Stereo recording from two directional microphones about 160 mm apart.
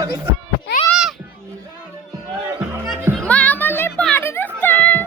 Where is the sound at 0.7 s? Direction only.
90° left.